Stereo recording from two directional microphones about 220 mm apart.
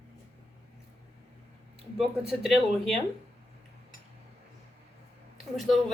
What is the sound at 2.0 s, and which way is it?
Speech, centre (ahead or behind).